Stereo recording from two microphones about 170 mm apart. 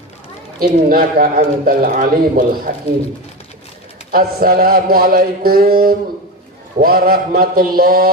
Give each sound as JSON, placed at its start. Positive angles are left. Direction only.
{"t": 0.6, "sound": "speech", "side_deg": -60}
{"t": 4.1, "sound": "speech", "side_deg": -60}